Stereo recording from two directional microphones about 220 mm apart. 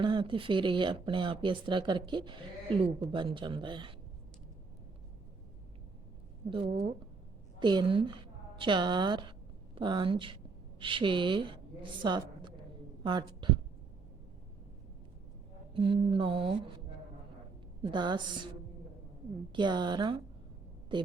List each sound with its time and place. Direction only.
0.0 s speech: 20° right (ahead or behind)
6.7 s a woman's voice: 45° right (ahead or behind)
7.6 s a woman's voice: 20° right (ahead or behind)
15.7 s speech: 25° right (ahead or behind)
17.8 s speech: 20° right (ahead or behind)
19.5 s speech: 20° right (ahead or behind)